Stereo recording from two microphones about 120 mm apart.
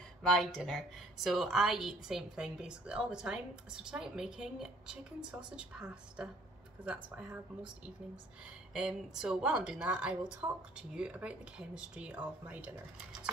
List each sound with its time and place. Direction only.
0.2 s a woman's voice: 5° left (ahead or behind)
8.7 s speech: 5° right (ahead or behind)
10.4 s speech: 25° right (ahead or behind)
10.8 s a woman's voice: 10° right (ahead or behind)